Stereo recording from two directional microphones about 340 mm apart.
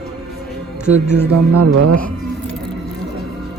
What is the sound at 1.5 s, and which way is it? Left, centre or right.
Speech, right.